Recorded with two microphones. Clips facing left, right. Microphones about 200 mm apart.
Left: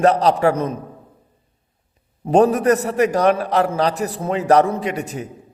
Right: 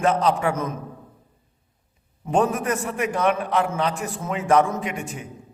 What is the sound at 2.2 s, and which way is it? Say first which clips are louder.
A man's voice: left 7 dB; 35° left (ahead or behind).